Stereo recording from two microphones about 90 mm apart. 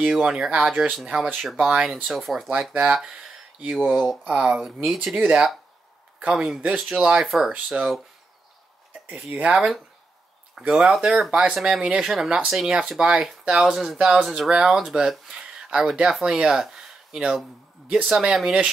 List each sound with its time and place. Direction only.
0.0 s speech: 10° right (ahead or behind)
0.9 s speech: centre (ahead or behind)
2.7 s speech: 15° right (ahead or behind)
4.2 s speech: 15° right (ahead or behind)
8.9 s a sound: 20° right (ahead or behind)
9.3 s speech: 10° right (ahead or behind)